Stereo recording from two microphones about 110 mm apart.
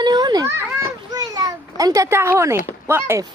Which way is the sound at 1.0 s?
35° right (ahead or behind).